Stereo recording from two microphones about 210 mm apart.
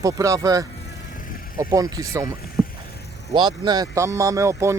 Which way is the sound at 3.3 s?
20° right (ahead or behind).